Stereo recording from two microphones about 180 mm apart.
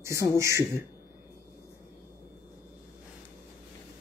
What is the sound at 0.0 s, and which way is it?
Speech, 15° right (ahead or behind).